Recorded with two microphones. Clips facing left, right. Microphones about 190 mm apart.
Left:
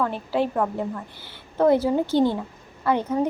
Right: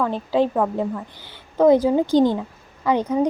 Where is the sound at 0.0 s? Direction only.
15° right (ahead or behind).